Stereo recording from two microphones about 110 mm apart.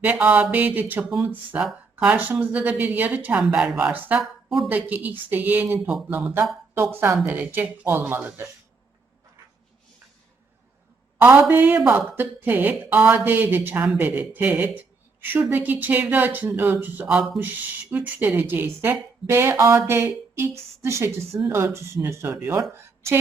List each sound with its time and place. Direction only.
0.0 s a woman's voice: 15° right (ahead or behind)
4.2 s speech: centre (ahead or behind)
4.7 s a woman's voice: 15° right (ahead or behind)
11.2 s a woman's voice: 20° right (ahead or behind)